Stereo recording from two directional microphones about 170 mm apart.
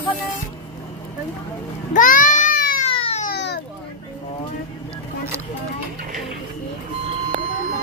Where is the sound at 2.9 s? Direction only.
35° left (ahead or behind).